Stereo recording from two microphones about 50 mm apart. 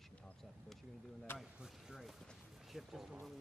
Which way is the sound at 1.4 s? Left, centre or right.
Centre.